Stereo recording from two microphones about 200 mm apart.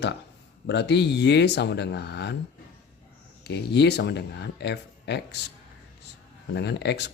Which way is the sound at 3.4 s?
55° left (ahead or behind).